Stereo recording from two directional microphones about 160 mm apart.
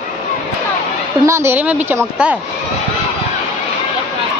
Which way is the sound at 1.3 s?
15° right (ahead or behind).